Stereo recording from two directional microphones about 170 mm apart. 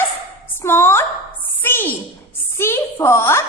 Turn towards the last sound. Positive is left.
turn(degrees=15)  # may be behind; listen again after turning